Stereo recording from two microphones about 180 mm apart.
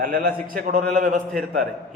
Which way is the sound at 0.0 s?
55° right (ahead or behind).